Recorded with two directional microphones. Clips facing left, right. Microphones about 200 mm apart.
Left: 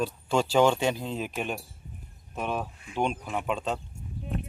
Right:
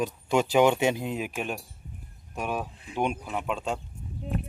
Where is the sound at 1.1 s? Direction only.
10° right (ahead or behind).